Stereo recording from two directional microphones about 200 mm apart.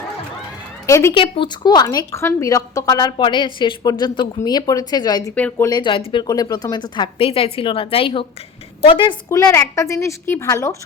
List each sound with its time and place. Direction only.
0.9 s a woman's voice: 15° left (ahead or behind)
1.1 s a woman's voice: 25° left (ahead or behind)
5.3 s a woman's voice: 5° left (ahead or behind)
5.6 s a woman's voice: 20° left (ahead or behind)